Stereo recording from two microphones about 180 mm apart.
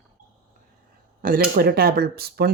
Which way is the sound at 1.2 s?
55° right (ahead or behind).